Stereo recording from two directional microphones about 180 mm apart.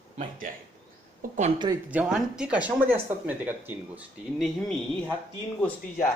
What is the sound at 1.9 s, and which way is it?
Speech, 5° right (ahead or behind).